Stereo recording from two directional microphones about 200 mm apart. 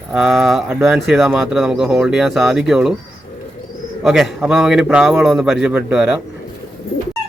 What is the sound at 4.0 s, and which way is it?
A man's voice, centre (ahead or behind).